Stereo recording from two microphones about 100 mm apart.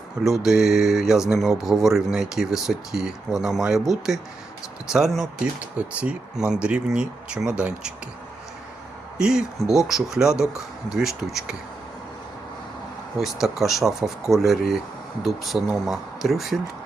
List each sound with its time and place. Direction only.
0.3 s speech: 5° right (ahead or behind)
9.1 s speech: 5° right (ahead or behind)
13.1 s speech: 5° right (ahead or behind)